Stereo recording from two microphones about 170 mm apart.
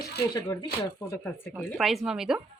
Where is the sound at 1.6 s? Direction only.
Centre (ahead or behind).